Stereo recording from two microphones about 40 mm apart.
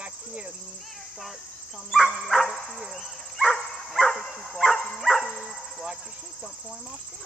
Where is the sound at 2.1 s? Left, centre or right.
Centre.